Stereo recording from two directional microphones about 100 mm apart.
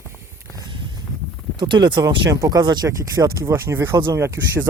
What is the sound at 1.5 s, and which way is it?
Speech, 50° right (ahead or behind).